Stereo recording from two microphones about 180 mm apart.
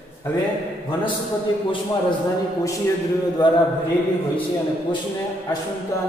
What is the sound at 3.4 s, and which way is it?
Mantra, 25° left (ahead or behind).